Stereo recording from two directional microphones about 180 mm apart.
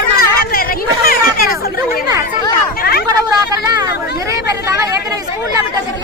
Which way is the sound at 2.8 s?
60° left (ahead or behind).